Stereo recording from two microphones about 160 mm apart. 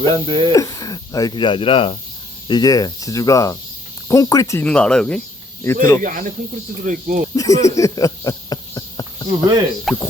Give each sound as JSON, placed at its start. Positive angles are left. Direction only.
{"t": 0.1, "sound": "speech", "side_deg": -30}
{"t": 0.5, "sound": "speech", "side_deg": 20}
{"t": 4.6, "sound": "speech", "side_deg": 5}
{"t": 5.6, "sound": "speech", "side_deg": 20}
{"t": 6.0, "sound": "speech", "side_deg": -55}
{"t": 7.3, "sound": "a sound", "side_deg": 20}
{"t": 9.3, "sound": "speech", "side_deg": -25}
{"t": 9.9, "sound": "insect", "side_deg": 0}